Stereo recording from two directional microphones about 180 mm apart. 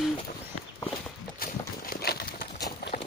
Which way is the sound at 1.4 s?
55° left (ahead or behind).